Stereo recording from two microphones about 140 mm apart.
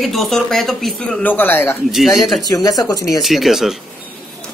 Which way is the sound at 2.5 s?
25° left (ahead or behind).